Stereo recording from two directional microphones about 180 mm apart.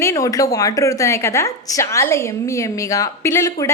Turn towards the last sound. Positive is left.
turn(degrees=15)  # may be behind; listen again after turning